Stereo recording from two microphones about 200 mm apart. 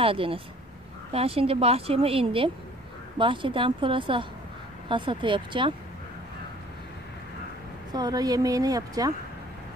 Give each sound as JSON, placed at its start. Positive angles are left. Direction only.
{"t": 0.0, "sound": "a woman's voice", "side_deg": -25}
{"t": 7.9, "sound": "a woman's voice", "side_deg": -20}